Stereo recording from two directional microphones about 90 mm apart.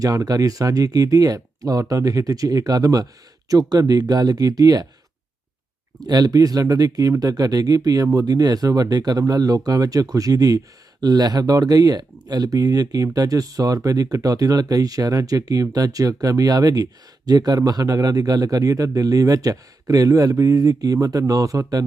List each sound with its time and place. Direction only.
0.0 s speech: 45° right (ahead or behind)
6.0 s speech: 50° right (ahead or behind)